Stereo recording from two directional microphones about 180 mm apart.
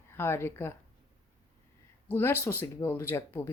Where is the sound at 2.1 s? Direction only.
10° left (ahead or behind).